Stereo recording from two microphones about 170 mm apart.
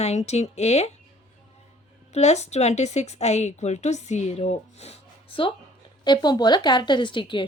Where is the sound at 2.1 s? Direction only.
40° left (ahead or behind).